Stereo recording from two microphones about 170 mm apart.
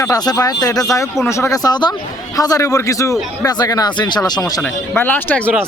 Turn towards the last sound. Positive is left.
turn(degrees=10)  # may be behind; listen again after turning